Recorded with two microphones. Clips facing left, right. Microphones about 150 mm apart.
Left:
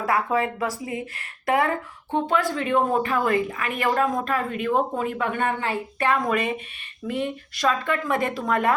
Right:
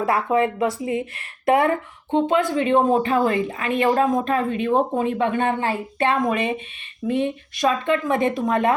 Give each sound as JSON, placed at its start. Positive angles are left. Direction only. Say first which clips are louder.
{"t": 0.0, "sound": "speech", "louder": "right 3 dB", "side_deg": -25}